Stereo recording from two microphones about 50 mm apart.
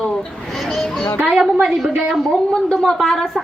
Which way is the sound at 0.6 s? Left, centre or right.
Centre.